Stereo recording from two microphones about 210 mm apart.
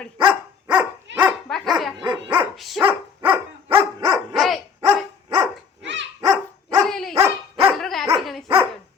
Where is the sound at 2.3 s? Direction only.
Centre (ahead or behind); by 4.2 s 15° right (ahead or behind).